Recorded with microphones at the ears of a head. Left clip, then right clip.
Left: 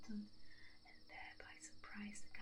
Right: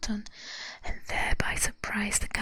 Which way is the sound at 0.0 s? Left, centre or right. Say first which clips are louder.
Right 19 dB; right.